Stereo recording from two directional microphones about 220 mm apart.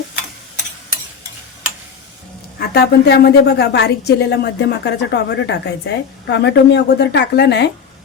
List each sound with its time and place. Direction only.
2.6 s a woman's voice: 45° left (ahead or behind)